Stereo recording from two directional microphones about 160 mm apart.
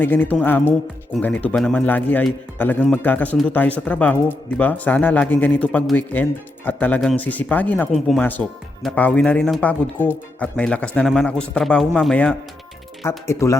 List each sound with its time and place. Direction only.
0.0 s speech: 10° left (ahead or behind)
7.9 s speech: centre (ahead or behind); by 13.6 s 15° left (ahead or behind)